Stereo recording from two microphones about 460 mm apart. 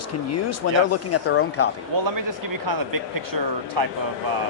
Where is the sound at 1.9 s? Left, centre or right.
Right.